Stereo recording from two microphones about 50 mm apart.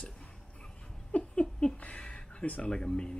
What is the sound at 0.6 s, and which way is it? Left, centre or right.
Laughter, centre.